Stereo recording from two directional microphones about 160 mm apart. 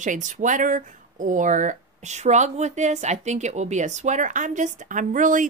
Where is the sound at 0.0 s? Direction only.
50° right (ahead or behind).